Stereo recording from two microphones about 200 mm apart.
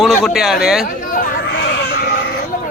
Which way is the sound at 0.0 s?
Centre (ahead or behind).